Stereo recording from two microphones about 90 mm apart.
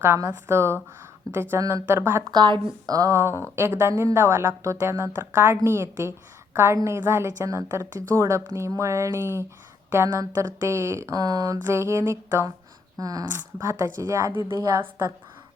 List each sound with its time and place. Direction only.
0.0 s a woman's voice: 25° right (ahead or behind)
2.3 s speech: 55° right (ahead or behind)
3.2 s a woman's voice: 30° right (ahead or behind)
11.6 s speech: 30° right (ahead or behind)
13.0 s speech: 45° right (ahead or behind)
13.3 s speech: 30° right (ahead or behind)
14.8 s a woman's voice: 25° right (ahead or behind)